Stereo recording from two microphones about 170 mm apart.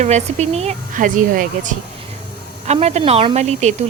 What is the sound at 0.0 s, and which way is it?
Speech, 40° right (ahead or behind).